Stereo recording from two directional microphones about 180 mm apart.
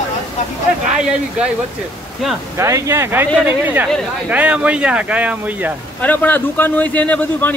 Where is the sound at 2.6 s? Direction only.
15° right (ahead or behind).